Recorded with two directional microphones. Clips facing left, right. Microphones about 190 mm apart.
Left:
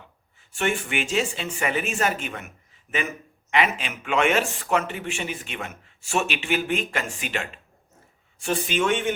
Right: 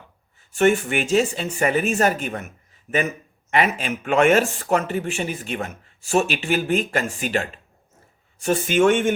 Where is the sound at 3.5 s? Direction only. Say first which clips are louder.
Right 3 dB; 45° right (ahead or behind).